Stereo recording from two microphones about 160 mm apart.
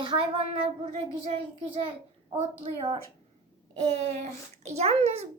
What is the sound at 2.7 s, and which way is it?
A child's voice, 40° right (ahead or behind).